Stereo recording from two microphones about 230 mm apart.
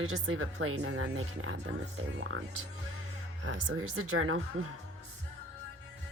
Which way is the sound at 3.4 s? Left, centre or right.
Right.